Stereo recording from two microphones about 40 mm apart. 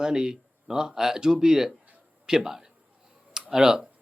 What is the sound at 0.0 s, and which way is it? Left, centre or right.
A man's voice, centre.